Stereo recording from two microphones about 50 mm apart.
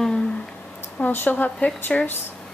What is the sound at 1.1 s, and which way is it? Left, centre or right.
Speech, left.